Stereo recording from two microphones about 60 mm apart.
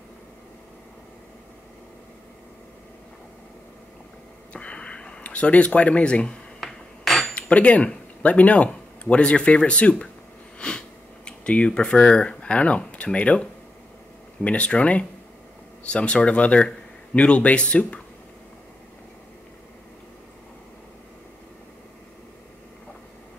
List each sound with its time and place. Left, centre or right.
4.5 s a sound: centre
6.6 s hammer: centre
7.3 s speech: left
10.6 s sniff: centre
11.2 s speech: centre